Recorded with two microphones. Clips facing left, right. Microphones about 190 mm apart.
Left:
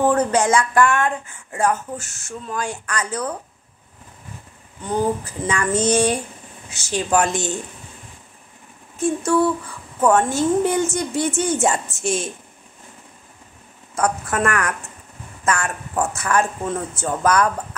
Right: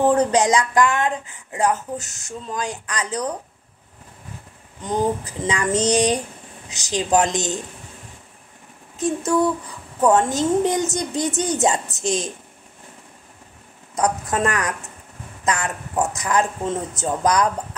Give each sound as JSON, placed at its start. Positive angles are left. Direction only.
{"t": 0.1, "sound": "speech", "side_deg": -15}
{"t": 4.8, "sound": "speech", "side_deg": -15}
{"t": 8.9, "sound": "speech", "side_deg": -20}
{"t": 13.9, "sound": "speech", "side_deg": -20}